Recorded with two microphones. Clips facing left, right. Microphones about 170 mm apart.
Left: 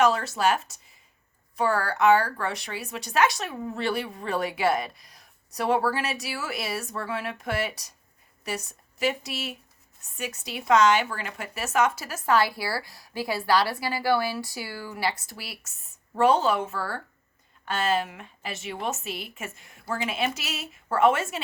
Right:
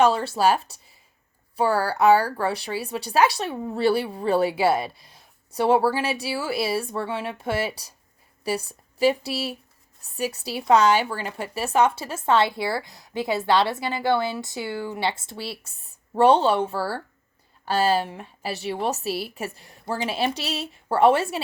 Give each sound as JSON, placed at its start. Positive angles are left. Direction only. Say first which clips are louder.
{"t": 0.0, "sound": "a woman's voice", "louder": "right 3 dB", "side_deg": -30}